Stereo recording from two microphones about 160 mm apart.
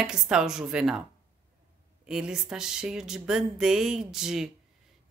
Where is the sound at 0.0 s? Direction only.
5° right (ahead or behind).